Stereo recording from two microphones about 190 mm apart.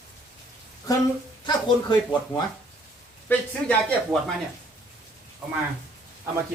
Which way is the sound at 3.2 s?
5° left (ahead or behind).